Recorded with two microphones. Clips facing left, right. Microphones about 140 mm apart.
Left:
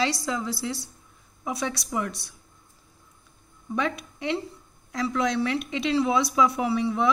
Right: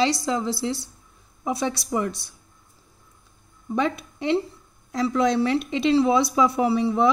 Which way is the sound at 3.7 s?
30° right (ahead or behind).